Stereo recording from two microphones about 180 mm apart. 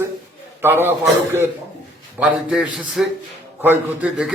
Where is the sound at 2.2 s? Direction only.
5° right (ahead or behind).